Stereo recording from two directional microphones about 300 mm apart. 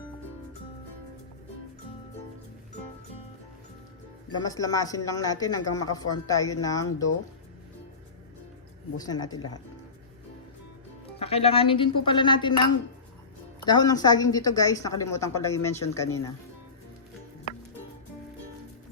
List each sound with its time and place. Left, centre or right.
4.4 s speech: centre
9.0 s speech: centre
11.2 s speech: centre
13.7 s speech: centre